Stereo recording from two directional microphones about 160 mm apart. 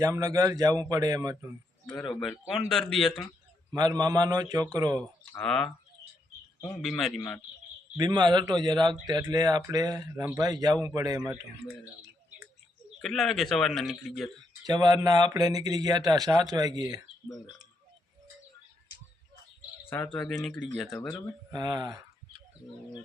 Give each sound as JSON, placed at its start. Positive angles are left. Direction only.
{"t": 0.0, "sound": "a man's voice", "side_deg": -20}
{"t": 1.9, "sound": "a man's voice", "side_deg": 5}
{"t": 3.7, "sound": "a man's voice", "side_deg": -25}
{"t": 5.4, "sound": "a man's voice", "side_deg": 5}
{"t": 6.8, "sound": "a man's voice", "side_deg": 0}
{"t": 7.9, "sound": "a man's voice", "side_deg": -25}
{"t": 13.0, "sound": "a man's voice", "side_deg": 0}
{"t": 14.7, "sound": "a man's voice", "side_deg": -25}
{"t": 19.9, "sound": "a man's voice", "side_deg": 10}
{"t": 21.5, "sound": "a sound", "side_deg": -25}